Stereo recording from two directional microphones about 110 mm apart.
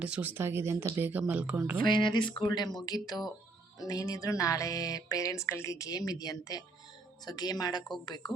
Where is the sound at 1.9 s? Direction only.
45° left (ahead or behind).